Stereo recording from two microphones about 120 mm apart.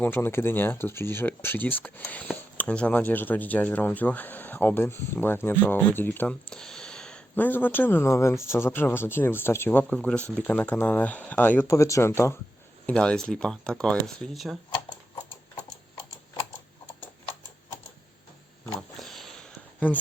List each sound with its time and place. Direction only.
0.0 s speech: 15° left (ahead or behind)
12.8 s speech: 10° left (ahead or behind)
18.9 s a sound: centre (ahead or behind)